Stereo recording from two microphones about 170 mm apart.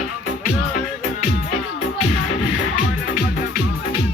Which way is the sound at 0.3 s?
55° left (ahead or behind).